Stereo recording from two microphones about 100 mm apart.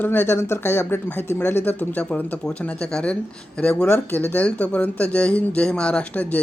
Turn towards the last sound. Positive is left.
turn(degrees=15)  # may be behind; listen again after turning